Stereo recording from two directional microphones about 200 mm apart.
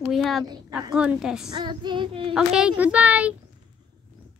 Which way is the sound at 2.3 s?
5° right (ahead or behind).